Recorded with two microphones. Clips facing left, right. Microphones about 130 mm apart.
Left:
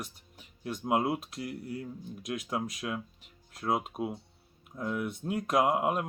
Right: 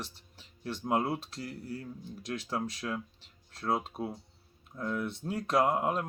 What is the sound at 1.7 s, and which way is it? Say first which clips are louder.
Speech: left 2 dB; 35° right (ahead or behind).